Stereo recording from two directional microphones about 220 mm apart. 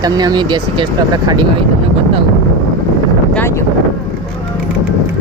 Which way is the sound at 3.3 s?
10° left (ahead or behind).